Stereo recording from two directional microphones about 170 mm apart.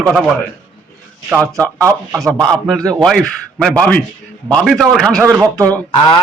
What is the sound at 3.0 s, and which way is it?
A man's voice, centre (ahead or behind).